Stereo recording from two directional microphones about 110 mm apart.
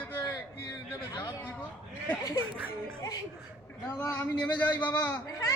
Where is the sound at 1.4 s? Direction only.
15° left (ahead or behind).